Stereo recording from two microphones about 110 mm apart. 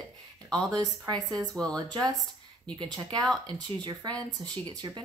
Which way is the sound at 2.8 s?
40° right (ahead or behind).